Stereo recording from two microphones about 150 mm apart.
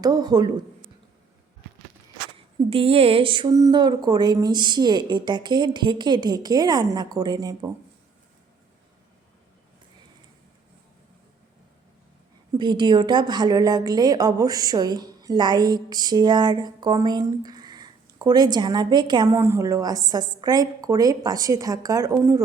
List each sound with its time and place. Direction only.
0.0 s a woman's voice: 25° right (ahead or behind)
2.6 s a woman's voice: 40° right (ahead or behind)
12.5 s a woman's voice: 30° right (ahead or behind)
19.3 s a woman's voice: 15° right (ahead or behind)